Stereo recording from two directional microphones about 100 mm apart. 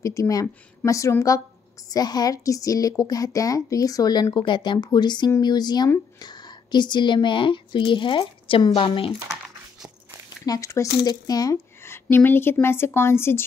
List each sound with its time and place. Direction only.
0.0 s a woman's voice: 35° left (ahead or behind); by 9.1 s 60° left (ahead or behind)
10.4 s a woman's voice: 35° left (ahead or behind)
11.5 s a woman's voice: 25° left (ahead or behind)